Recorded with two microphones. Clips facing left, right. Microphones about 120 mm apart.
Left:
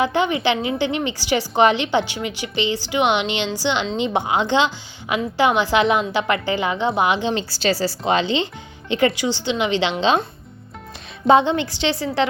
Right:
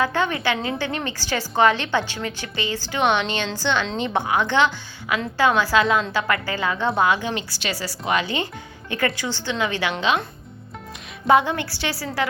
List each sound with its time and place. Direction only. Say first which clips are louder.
0.0 s a woman's voice: left 3 dB; 15° left (ahead or behind)
11.3 s a woman's voice: left 3 dB; 25° left (ahead or behind)